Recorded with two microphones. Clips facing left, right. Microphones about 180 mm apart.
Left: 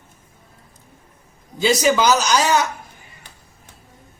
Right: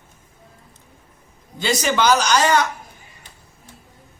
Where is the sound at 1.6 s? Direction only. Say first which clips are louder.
Left 3 dB; 5° left (ahead or behind).